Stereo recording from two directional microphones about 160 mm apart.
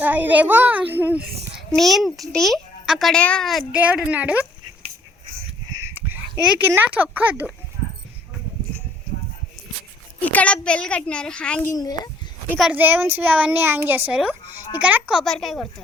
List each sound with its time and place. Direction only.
0.0 s a child's voice: 10° right (ahead or behind)
1.5 s a child's voice: centre (ahead or behind)
5.7 s a sound: 15° right (ahead or behind)
6.7 s a child's voice: 10° right (ahead or behind)
10.2 s a child's voice: 10° left (ahead or behind)
11.7 s a child's voice: 25° left (ahead or behind)
12.5 s a child's voice: 5° right (ahead or behind)
15.2 s a woman's voice: centre (ahead or behind)